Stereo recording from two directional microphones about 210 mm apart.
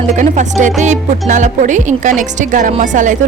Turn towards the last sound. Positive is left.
turn(degrees=-35)  # may be behind; listen again after turning